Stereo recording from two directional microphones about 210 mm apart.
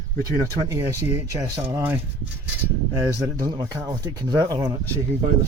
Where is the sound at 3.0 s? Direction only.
15° right (ahead or behind).